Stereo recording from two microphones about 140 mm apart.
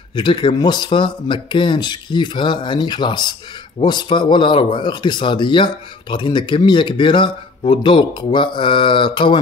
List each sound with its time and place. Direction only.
0.1 s speech: 35° left (ahead or behind)